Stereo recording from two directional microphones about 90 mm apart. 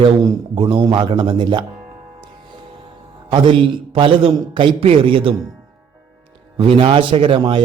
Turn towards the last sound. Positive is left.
turn(degrees=-70)  # may be behind; listen again after turning